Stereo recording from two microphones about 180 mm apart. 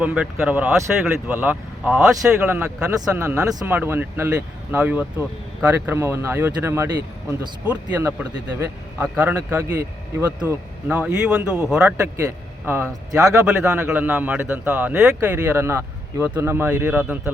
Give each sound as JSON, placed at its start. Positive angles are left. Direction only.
{"t": 0.0, "sound": "a man's voice", "side_deg": -5}